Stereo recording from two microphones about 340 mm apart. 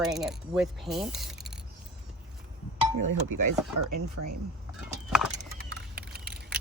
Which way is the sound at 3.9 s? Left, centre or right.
Right.